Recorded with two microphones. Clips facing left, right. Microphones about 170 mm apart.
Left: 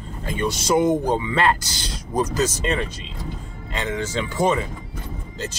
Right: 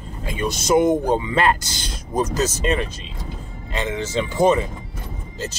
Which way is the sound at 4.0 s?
10° right (ahead or behind).